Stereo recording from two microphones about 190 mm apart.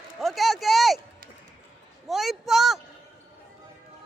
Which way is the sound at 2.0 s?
Centre (ahead or behind).